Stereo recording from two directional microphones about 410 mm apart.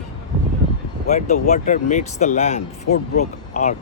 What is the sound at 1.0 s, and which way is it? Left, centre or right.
Speech, centre.